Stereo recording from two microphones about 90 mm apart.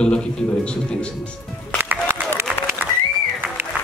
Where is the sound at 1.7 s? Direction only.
25° right (ahead or behind).